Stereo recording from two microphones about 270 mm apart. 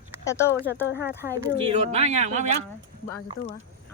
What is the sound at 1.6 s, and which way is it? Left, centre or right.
Speech, right.